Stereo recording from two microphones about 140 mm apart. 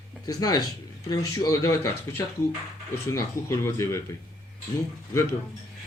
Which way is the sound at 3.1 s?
20° left (ahead or behind).